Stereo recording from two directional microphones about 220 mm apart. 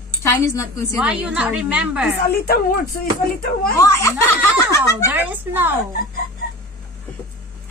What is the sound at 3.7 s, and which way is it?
Speech, 15° left (ahead or behind).